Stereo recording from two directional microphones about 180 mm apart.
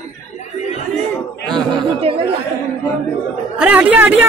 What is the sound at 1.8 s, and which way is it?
Speech, 30° right (ahead or behind).